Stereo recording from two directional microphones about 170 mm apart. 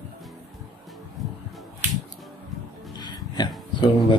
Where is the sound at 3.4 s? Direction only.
25° left (ahead or behind).